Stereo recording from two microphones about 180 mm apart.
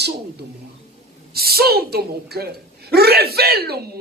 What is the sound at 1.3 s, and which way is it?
A man's voice, 60° right (ahead or behind).